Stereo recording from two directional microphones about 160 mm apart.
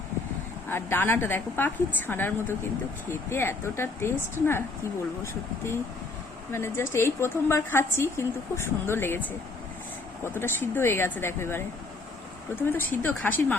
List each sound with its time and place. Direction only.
0.7 s a woman's voice: 15° left (ahead or behind)
12.7 s a woman's voice: 10° left (ahead or behind)